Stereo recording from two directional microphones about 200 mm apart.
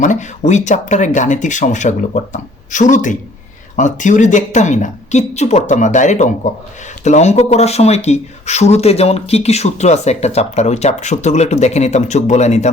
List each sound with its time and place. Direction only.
0.0 s speech: 35° left (ahead or behind)